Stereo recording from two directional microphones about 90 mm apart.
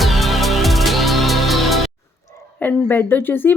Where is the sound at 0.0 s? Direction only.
Centre (ahead or behind).